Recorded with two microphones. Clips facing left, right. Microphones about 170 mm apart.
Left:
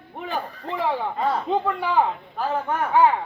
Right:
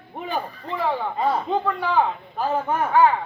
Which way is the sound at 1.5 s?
10° left (ahead or behind).